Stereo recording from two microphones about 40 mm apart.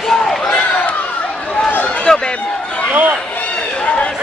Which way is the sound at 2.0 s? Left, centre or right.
Centre.